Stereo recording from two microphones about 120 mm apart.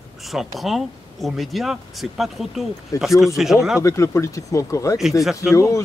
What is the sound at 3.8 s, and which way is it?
Speech, 25° left (ahead or behind).